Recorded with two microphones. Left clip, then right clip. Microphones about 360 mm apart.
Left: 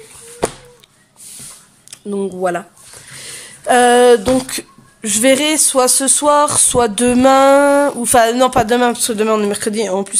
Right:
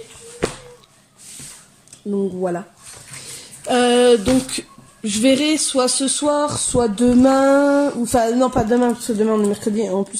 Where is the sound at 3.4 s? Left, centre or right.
Centre.